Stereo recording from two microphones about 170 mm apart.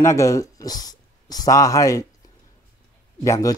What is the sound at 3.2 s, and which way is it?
Speech, 15° left (ahead or behind).